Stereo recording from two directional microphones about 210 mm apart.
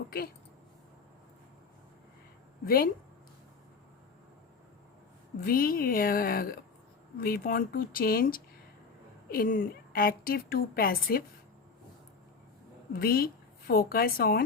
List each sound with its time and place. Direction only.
2.6 s a woman's voice: 45° left (ahead or behind)
5.4 s a woman's voice: 45° left (ahead or behind)
13.0 s a woman's voice: 45° left (ahead or behind)